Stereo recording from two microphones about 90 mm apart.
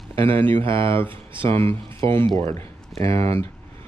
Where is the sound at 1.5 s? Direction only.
25° left (ahead or behind).